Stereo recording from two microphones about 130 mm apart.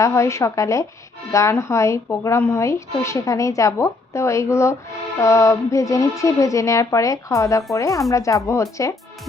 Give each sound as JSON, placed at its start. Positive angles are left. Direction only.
{"t": 0.0, "sound": "speech", "side_deg": 25}